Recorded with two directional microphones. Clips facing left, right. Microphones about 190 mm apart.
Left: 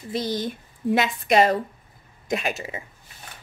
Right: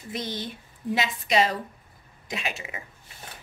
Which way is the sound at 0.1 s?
35° left (ahead or behind).